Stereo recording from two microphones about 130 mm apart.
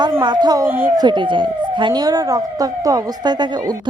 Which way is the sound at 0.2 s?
35° right (ahead or behind).